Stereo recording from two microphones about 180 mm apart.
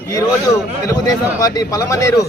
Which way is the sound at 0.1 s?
20° left (ahead or behind).